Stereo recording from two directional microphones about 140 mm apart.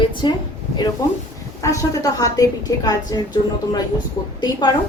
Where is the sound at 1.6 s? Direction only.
25° left (ahead or behind).